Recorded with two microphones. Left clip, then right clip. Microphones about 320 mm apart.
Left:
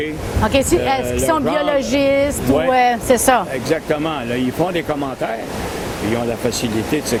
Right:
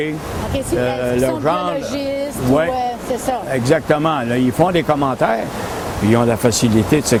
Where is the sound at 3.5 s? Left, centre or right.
Right.